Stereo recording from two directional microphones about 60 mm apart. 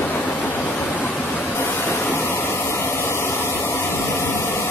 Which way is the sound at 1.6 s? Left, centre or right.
Left.